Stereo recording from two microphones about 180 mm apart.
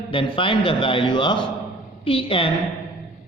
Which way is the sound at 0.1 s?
30° left (ahead or behind).